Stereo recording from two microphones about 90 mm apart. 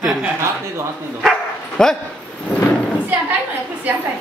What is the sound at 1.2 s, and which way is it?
Dog, 5° left (ahead or behind).